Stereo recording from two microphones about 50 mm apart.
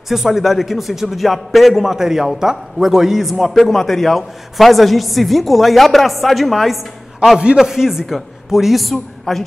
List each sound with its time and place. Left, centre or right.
0.1 s a man's voice: centre
7.3 s a man's voice: centre